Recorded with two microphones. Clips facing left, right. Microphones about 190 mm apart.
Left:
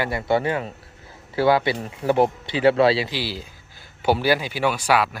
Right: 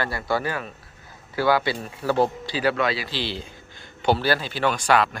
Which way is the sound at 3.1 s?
5° left (ahead or behind).